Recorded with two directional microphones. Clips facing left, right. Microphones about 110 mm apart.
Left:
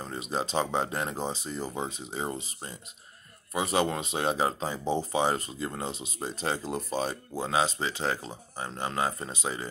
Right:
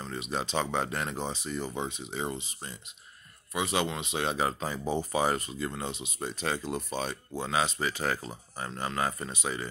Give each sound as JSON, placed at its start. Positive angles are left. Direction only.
{"t": 0.0, "sound": "speech", "side_deg": 35}